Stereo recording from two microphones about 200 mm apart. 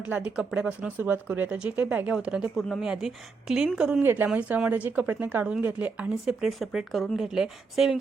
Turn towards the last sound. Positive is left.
turn(degrees=0)  # may be behind; listen again after turning